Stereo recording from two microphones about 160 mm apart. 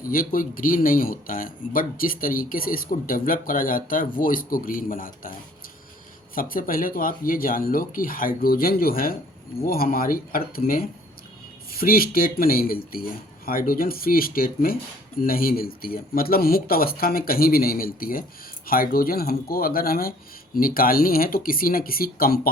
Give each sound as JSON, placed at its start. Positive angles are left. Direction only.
{"t": 0.0, "sound": "speech", "side_deg": 60}
{"t": 6.3, "sound": "speech", "side_deg": 60}